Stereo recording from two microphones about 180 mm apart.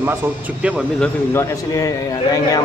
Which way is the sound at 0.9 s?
10° left (ahead or behind).